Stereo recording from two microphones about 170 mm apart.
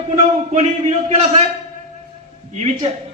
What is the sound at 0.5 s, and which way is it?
Speech, 40° right (ahead or behind).